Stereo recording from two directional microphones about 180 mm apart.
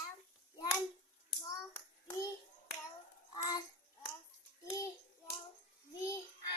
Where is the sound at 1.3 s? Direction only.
10° left (ahead or behind).